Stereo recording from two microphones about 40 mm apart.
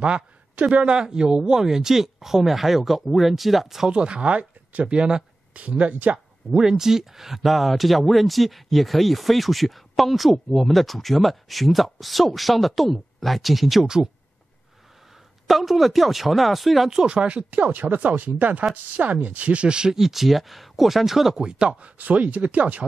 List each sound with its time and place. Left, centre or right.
0.0 s speech: right; by 3.9 s centre
3.9 s speech: right
6.1 s speech: centre
15.4 s speech: centre
17.0 s speech: right
17.5 s speech: right
20.0 s speech: centre
21.4 s speech: right